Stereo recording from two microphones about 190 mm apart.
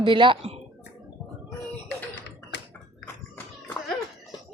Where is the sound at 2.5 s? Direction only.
65° left (ahead or behind).